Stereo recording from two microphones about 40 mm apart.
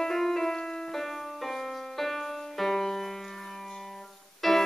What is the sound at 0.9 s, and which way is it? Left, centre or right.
Music, centre.